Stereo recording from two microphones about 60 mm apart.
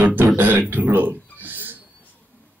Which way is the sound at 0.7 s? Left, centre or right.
Right.